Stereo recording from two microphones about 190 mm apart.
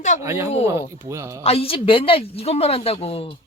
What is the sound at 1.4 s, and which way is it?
Speech, 30° left (ahead or behind).